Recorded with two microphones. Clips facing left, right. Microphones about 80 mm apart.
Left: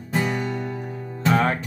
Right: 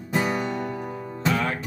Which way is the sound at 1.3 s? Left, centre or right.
Left.